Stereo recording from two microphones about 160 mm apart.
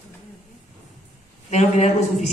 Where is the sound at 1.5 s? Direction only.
45° left (ahead or behind).